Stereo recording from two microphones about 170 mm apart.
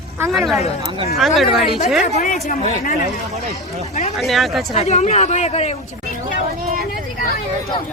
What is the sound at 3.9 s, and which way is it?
Speech, 40° left (ahead or behind).